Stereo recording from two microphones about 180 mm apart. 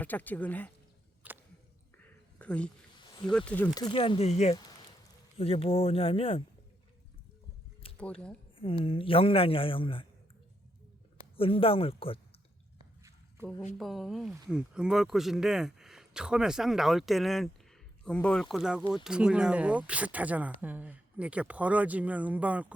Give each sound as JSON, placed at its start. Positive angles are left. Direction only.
{"t": 0.0, "sound": "speech", "side_deg": 10}
{"t": 1.2, "sound": "a sound", "side_deg": -10}
{"t": 2.0, "sound": "a sound", "side_deg": 10}
{"t": 3.2, "sound": "speech", "side_deg": 5}
{"t": 3.8, "sound": "speech", "side_deg": 25}
{"t": 7.9, "sound": "speech", "side_deg": 5}
{"t": 8.5, "sound": "a man's voice", "side_deg": 30}
{"t": 11.2, "sound": "speech", "side_deg": 30}
{"t": 13.0, "sound": "a sound", "side_deg": -15}
{"t": 13.7, "sound": "speech", "side_deg": 0}